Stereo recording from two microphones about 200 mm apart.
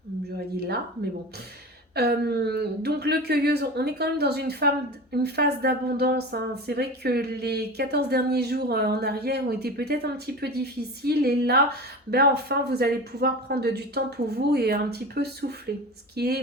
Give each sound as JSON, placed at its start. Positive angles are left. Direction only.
{"t": 0.3, "sound": "speech", "side_deg": -50}
{"t": 2.0, "sound": "a woman's voice", "side_deg": -55}